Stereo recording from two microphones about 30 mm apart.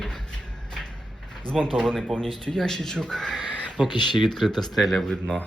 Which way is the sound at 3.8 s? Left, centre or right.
Right.